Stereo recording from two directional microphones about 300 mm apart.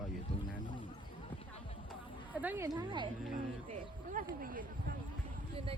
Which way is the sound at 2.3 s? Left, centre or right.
Centre.